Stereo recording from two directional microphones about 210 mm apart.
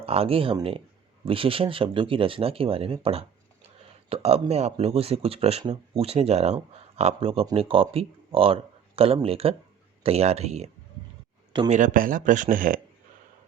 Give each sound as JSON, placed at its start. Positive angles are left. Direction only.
{"t": 0.0, "sound": "speech", "side_deg": -30}
{"t": 11.7, "sound": "speech", "side_deg": -40}